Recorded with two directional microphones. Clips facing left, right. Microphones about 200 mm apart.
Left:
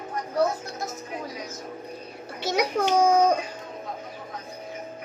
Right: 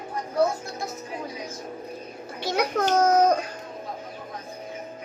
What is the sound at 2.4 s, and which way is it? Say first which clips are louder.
Speech: even; 15° left (ahead or behind).